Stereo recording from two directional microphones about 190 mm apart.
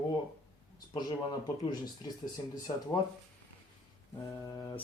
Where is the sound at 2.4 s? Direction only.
25° left (ahead or behind).